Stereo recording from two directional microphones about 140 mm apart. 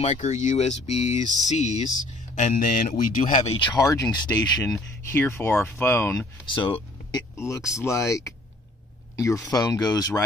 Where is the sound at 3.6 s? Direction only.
25° left (ahead or behind).